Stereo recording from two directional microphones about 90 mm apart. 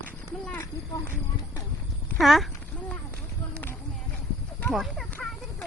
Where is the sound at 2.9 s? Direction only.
20° left (ahead or behind).